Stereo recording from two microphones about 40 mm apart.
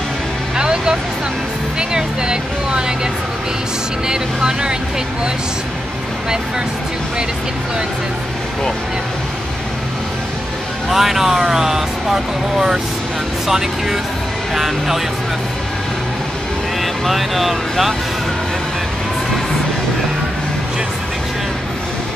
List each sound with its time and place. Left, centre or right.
0.6 s vehicle: right
1.8 s speech: right
4.1 s speech: centre
10.9 s speech: centre
16.8 s speech: centre